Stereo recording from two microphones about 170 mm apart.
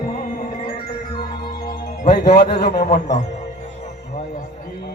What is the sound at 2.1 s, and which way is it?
Speech, 75° left (ahead or behind).